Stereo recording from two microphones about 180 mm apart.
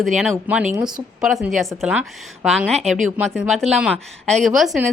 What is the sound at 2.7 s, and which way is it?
Speech, 40° right (ahead or behind).